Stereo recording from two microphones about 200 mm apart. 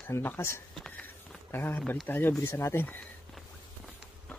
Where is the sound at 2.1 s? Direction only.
10° left (ahead or behind).